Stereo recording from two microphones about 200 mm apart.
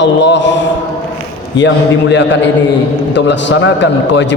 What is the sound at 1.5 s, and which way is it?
A man's voice, 65° left (ahead or behind).